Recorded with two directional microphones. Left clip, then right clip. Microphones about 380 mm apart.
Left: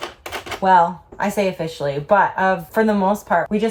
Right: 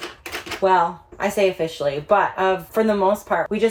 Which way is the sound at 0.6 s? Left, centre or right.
Centre.